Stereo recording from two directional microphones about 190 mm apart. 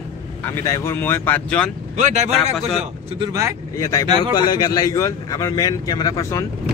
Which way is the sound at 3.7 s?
15° left (ahead or behind).